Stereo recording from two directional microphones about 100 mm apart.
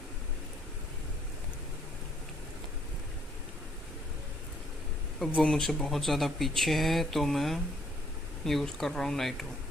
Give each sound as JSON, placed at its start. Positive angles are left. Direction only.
{"t": 5.2, "sound": "speech", "side_deg": 5}